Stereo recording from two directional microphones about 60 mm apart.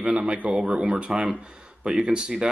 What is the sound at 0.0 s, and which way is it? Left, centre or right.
Speech, right.